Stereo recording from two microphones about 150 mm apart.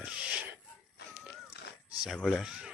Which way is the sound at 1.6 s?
90° left.